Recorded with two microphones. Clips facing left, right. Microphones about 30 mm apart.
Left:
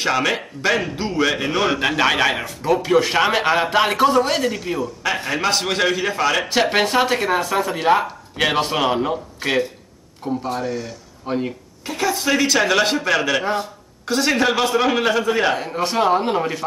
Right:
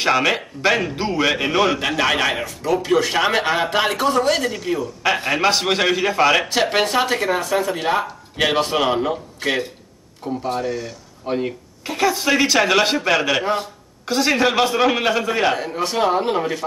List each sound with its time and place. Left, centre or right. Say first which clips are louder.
0.0 s a man's voice: right 2 dB; centre
1.7 s speech: left 1 dB; centre
2.4 s speech: left 1 dB; left
2.8 s speech: left 1 dB; centre
5.2 s a man's voice: right 1 dB; centre
6.6 s a man's voice: left 1 dB; centre